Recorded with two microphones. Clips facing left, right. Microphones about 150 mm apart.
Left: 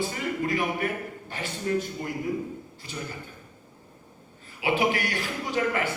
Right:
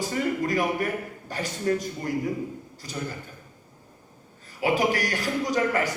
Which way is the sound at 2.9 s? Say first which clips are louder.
Right 3 dB; 40° right (ahead or behind).